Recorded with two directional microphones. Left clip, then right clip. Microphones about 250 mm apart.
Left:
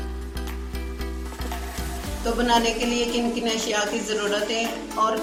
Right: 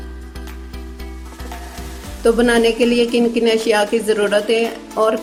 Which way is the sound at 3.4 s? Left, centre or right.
Right.